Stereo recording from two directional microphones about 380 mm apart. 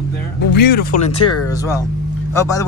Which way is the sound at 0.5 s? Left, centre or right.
Left.